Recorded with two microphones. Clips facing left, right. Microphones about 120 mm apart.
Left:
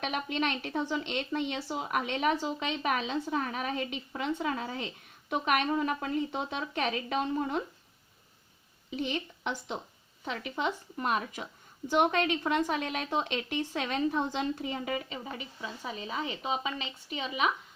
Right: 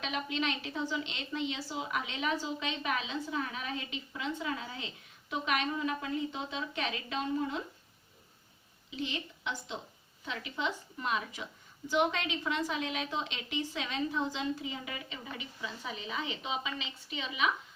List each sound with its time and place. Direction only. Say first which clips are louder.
0.0 s a woman's voice: left 3 dB; 50° left (ahead or behind)
8.9 s a woman's voice: left 5 dB; 50° left (ahead or behind)